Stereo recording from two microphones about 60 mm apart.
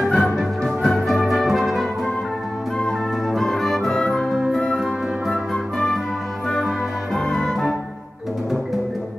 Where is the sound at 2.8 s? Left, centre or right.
Centre.